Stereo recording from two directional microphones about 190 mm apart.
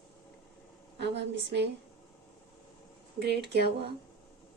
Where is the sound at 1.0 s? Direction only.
65° right (ahead or behind).